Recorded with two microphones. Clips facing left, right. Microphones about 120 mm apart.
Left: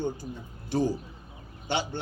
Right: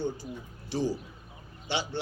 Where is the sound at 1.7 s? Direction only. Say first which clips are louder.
Left 2 dB; 50° left (ahead or behind).